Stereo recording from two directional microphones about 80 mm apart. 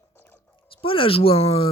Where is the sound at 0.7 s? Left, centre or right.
Left.